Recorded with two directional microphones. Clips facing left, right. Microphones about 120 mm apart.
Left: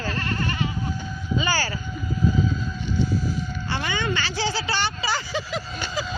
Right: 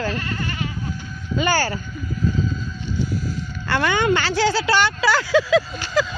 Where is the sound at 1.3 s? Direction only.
55° right (ahead or behind).